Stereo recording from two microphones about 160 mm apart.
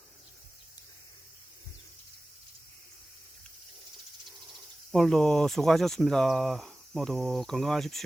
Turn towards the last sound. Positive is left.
turn(degrees=0)  # may be behind; listen again after turning